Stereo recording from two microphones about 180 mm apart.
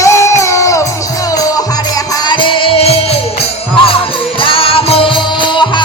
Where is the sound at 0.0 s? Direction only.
15° left (ahead or behind); by 3.2 s 35° left (ahead or behind).